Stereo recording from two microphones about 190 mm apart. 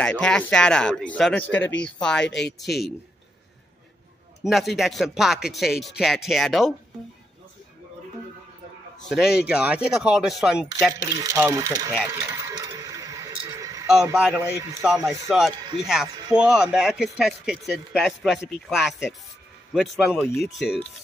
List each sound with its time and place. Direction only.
0.0 s speech: 5° left (ahead or behind)
2.2 s speech: 65° left (ahead or behind)
2.6 s speech: centre (ahead or behind)
4.4 s speech: centre (ahead or behind)
9.1 s speech: 5° right (ahead or behind)
11.0 s a man's voice: 15° right (ahead or behind)
12.1 s a sound: 15° right (ahead or behind)
14.1 s a man's voice: 5° right (ahead or behind)
15.0 s speech: centre (ahead or behind)
20.2 s speech: 15° left (ahead or behind)
20.4 s speech: centre (ahead or behind)